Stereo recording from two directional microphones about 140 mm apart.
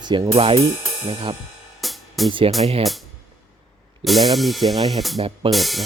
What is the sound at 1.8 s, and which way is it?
Music, centre (ahead or behind).